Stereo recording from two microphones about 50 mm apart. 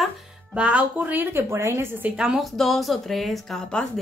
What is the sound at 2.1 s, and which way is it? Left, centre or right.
Speech, centre.